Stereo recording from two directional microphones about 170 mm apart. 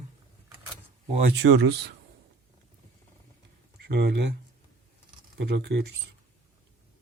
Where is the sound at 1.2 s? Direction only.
90° right.